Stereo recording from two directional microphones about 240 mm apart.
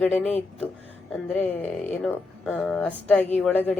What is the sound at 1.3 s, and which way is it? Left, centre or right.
A woman's voice, centre.